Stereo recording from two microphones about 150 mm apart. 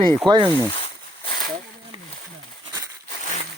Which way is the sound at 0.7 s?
40° left (ahead or behind).